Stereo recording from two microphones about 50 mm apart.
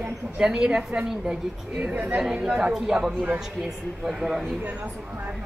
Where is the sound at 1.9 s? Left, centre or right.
Right.